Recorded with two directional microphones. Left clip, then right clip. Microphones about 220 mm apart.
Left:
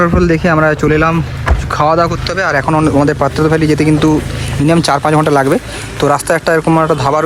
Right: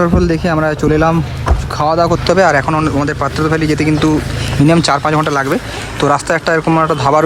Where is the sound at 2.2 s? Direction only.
25° right (ahead or behind).